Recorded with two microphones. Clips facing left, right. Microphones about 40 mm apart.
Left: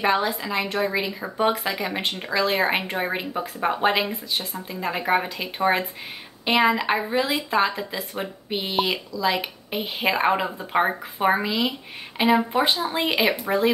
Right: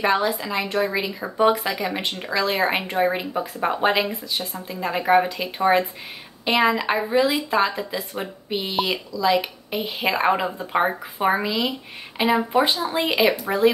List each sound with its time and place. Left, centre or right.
0.0 s speech: centre